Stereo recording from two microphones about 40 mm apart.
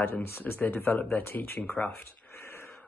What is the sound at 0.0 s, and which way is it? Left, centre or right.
Speech, left.